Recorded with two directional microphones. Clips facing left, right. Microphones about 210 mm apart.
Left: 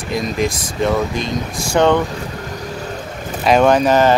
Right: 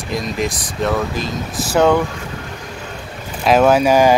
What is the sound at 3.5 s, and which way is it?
Speech, 5° right (ahead or behind).